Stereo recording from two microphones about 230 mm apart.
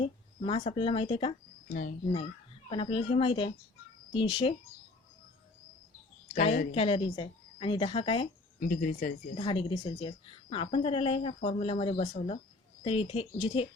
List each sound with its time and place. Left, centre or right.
0.0 s speech: left
2.6 s a woman's voice: left
6.3 s a woman's voice: left
8.6 s speech: left
9.4 s a woman's voice: left